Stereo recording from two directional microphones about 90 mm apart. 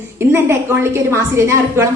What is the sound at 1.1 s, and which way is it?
Speech, 30° right (ahead or behind).